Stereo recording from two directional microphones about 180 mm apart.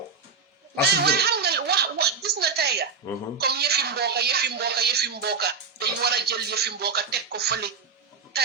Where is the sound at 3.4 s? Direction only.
65° right (ahead or behind).